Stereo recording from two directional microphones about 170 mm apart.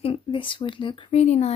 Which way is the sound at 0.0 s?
30° left (ahead or behind).